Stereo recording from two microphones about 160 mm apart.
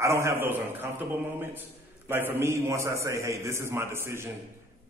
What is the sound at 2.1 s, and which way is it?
A man's voice, 15° right (ahead or behind).